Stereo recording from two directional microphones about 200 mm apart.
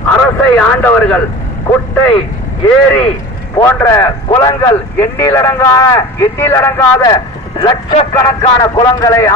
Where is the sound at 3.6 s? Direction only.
10° left (ahead or behind).